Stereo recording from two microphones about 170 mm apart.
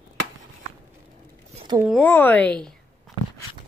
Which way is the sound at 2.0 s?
10° left (ahead or behind).